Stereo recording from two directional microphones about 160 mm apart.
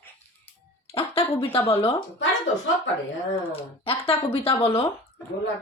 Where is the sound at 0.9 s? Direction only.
35° left (ahead or behind).